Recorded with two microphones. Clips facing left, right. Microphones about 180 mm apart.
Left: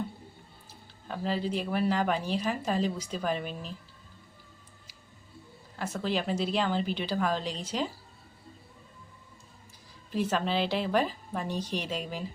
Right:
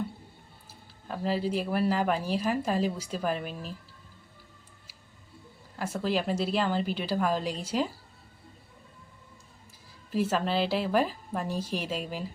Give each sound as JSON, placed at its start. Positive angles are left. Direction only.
{"t": 0.7, "sound": "speech", "side_deg": 0}
{"t": 5.8, "sound": "speech", "side_deg": -5}
{"t": 10.1, "sound": "speech", "side_deg": -5}